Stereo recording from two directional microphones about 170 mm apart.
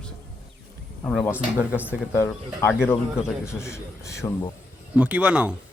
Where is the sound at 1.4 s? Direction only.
10° right (ahead or behind).